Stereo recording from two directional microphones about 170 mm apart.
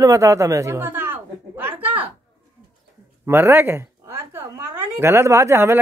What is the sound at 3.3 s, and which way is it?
A woman's voice, 15° right (ahead or behind).